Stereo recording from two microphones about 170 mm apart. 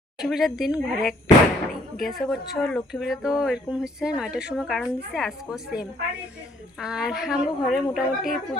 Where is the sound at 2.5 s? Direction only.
Centre (ahead or behind).